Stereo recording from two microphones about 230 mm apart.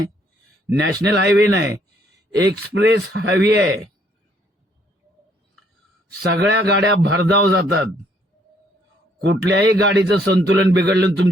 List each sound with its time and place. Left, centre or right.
0.7 s a man's voice: right
6.3 s a man's voice: right
9.2 s a man's voice: right